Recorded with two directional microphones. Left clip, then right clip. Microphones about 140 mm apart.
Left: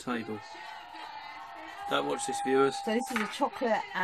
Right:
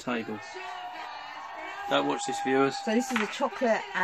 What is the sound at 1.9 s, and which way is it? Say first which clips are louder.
Speech: right 3 dB; 25° right (ahead or behind).